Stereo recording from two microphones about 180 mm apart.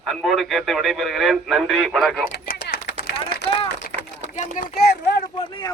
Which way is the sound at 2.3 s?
60° left (ahead or behind).